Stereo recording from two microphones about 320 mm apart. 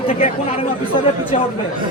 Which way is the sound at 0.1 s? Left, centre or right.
Left.